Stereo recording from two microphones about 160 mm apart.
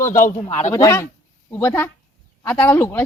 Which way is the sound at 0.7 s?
20° left (ahead or behind).